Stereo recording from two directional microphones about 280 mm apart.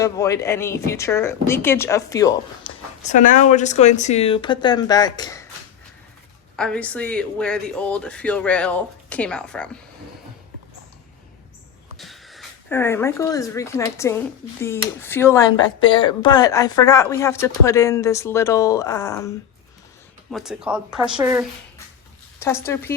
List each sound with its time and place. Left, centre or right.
0.0 s speech: centre
3.1 s speech: left
6.6 s speech: centre
11.9 s speech: centre
20.3 s speech: centre
22.4 s speech: centre